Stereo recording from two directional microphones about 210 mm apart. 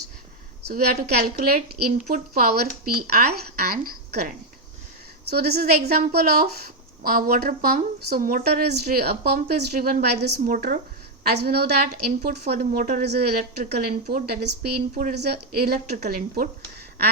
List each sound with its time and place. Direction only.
0.7 s a woman's voice: 40° right (ahead or behind)